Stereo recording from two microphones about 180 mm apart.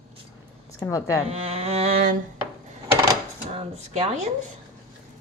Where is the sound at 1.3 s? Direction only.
35° right (ahead or behind).